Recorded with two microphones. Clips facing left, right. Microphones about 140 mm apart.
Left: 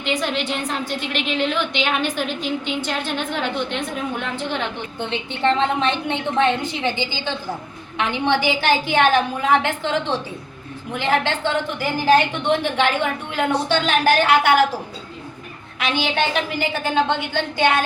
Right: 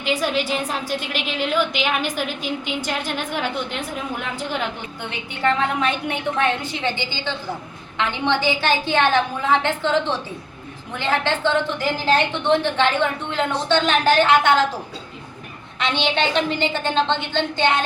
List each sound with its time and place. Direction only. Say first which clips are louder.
0.0 s a woman's voice: right 1 dB; 5° right (ahead or behind)
4.9 s a woman's voice: left 4 dB; 25° left (ahead or behind)
15.8 s a woman's voice: even; 5° left (ahead or behind)